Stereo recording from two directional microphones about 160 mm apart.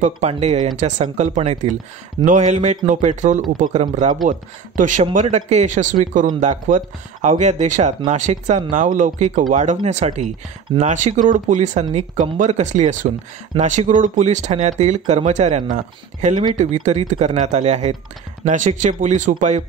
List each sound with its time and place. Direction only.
0.0 s speech: 45° right (ahead or behind)